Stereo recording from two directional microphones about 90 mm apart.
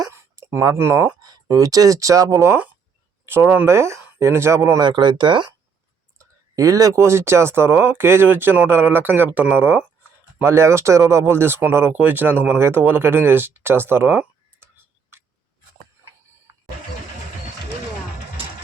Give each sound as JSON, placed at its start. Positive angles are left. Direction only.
{"t": 0.1, "sound": "a sound", "side_deg": -30}
{"t": 0.8, "sound": "speech", "side_deg": -30}
{"t": 1.2, "sound": "speech", "side_deg": -45}
{"t": 3.2, "sound": "speech", "side_deg": -25}
{"t": 3.7, "sound": "speech", "side_deg": -30}
{"t": 4.8, "sound": "speech", "side_deg": -60}
{"t": 6.1, "sound": "speech", "side_deg": -35}